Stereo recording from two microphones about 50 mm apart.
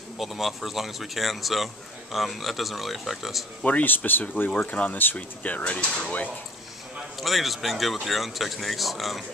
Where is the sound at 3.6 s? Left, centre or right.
Left.